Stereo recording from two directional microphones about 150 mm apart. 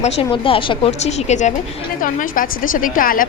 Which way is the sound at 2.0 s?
65° left (ahead or behind).